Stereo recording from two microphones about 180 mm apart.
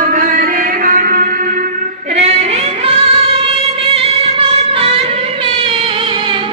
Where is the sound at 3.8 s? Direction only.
35° right (ahead or behind).